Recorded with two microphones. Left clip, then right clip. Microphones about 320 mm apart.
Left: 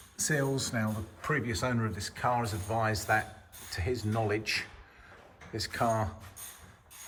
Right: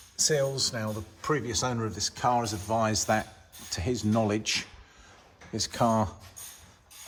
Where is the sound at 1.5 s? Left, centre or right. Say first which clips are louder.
Right 2 dB; centre.